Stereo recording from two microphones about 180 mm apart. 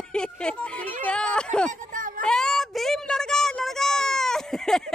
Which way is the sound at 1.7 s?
45° right (ahead or behind).